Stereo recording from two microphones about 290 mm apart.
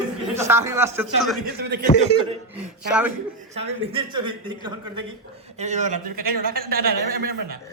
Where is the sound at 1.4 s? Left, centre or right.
Right.